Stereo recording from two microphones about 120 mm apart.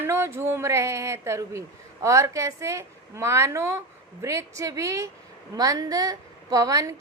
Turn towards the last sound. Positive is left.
turn(degrees=-30)  # may be behind; listen again after turning